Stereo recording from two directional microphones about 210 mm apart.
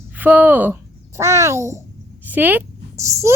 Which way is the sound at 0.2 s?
10° right (ahead or behind).